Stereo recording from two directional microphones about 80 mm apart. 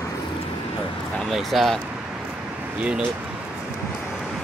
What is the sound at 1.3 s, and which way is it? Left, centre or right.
Speech, centre.